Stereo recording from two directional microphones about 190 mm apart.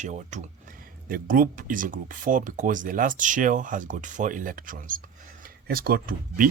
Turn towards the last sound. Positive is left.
turn(degrees=-50)  # may be behind; listen again after turning